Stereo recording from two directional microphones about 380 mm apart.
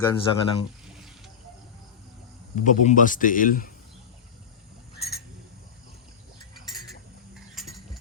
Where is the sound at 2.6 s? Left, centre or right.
Left.